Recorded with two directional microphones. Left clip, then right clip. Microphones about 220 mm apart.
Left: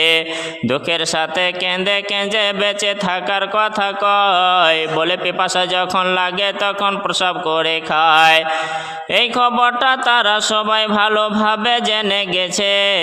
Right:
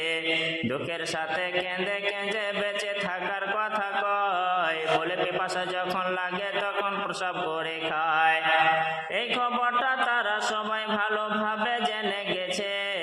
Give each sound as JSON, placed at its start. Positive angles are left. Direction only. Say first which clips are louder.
{"t": 1.9, "sound": "mantra", "louder": "left 11 dB", "side_deg": 45}